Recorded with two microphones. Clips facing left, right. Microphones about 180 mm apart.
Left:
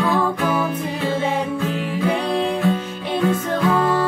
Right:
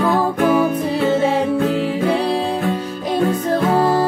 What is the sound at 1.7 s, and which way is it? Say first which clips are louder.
Music: right 4 dB; 30° right (ahead or behind).